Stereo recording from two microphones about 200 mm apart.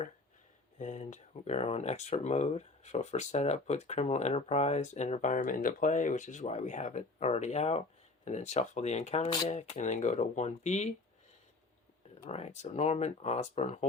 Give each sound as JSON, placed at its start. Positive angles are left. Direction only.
{"t": 0.8, "sound": "speech", "side_deg": 35}
{"t": 12.3, "sound": "speech", "side_deg": 35}